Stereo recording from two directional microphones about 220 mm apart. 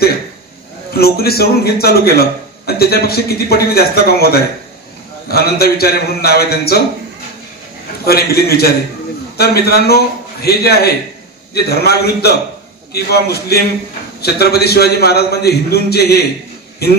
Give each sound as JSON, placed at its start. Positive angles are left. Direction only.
{"t": 0.9, "sound": "a man's voice", "side_deg": 45}
{"t": 8.0, "sound": "a man's voice", "side_deg": 45}